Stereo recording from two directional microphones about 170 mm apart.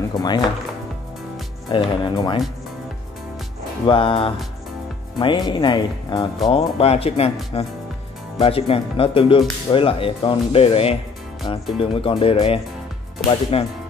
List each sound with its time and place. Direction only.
0.1 s speech: 25° left (ahead or behind)
1.7 s speech: 30° left (ahead or behind)
3.8 s speech: 30° left (ahead or behind)
8.4 s speech: 35° left (ahead or behind)